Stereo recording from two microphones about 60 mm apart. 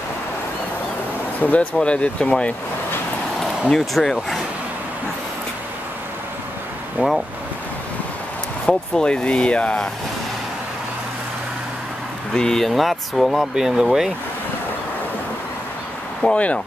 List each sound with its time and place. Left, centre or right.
1.4 s speech: left
3.7 s speech: centre
7.0 s speech: right
8.9 s speech: centre
12.4 s speech: centre
16.2 s speech: centre